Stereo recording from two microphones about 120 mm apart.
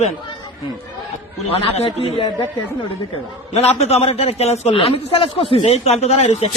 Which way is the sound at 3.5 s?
65° left (ahead or behind).